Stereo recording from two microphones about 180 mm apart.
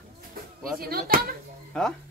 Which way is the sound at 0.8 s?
55° right (ahead or behind).